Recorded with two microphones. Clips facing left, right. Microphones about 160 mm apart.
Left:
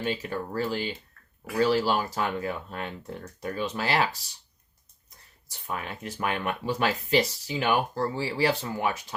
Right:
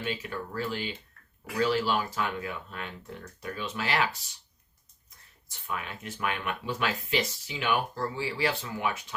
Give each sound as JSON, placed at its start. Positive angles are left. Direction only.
{"t": 0.0, "sound": "speech", "side_deg": 40}
{"t": 5.5, "sound": "speech", "side_deg": 40}